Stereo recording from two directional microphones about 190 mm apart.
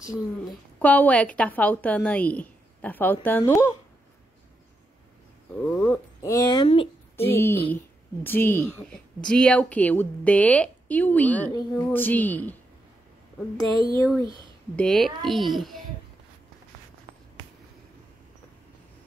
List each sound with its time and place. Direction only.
0.1 s a woman's voice: centre (ahead or behind)
5.6 s a woman's voice: 5° left (ahead or behind); by 6.9 s 25° left (ahead or behind)
7.2 s a woman's voice: 10° left (ahead or behind)
13.7 s speech: 20° left (ahead or behind)
14.8 s a child's voice: centre (ahead or behind)